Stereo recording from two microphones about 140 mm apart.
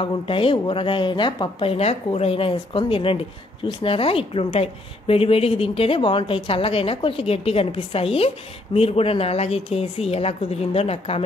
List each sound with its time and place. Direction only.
0.0 s a woman's voice: 40° left (ahead or behind)